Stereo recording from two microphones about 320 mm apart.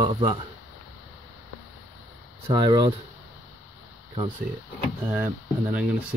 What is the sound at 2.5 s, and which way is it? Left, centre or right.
Speech, centre.